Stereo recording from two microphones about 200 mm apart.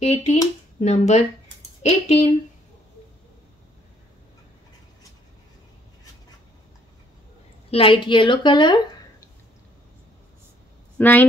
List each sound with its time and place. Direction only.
0.0 s speech: 35° left (ahead or behind)
7.7 s a woman's voice: 25° left (ahead or behind)
11.0 s a woman's voice: 10° left (ahead or behind)